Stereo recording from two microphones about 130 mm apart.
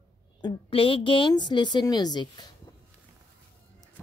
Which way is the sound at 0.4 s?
40° left (ahead or behind).